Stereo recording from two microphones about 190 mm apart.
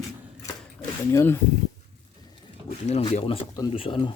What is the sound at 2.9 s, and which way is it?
Speech, 35° left (ahead or behind).